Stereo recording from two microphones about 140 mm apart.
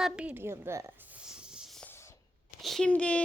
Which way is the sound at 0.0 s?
10° right (ahead or behind).